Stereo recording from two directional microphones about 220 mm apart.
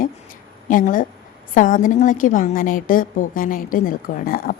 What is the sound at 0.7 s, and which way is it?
A woman's voice, 35° left (ahead or behind).